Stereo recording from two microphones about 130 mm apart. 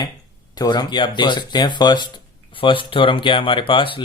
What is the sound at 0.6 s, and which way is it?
Speech, 35° left (ahead or behind).